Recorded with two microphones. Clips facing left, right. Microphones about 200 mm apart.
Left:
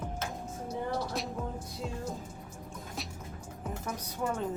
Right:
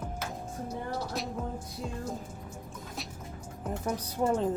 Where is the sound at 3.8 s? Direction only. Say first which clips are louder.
Right 6 dB; 30° right (ahead or behind).